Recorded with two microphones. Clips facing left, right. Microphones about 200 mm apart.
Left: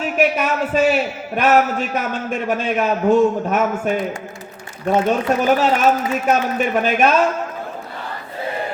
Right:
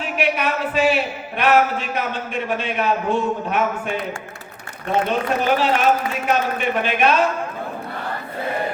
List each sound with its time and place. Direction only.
0.0 s a man's voice: 45° left (ahead or behind)
5.0 s a man's voice: 45° left (ahead or behind)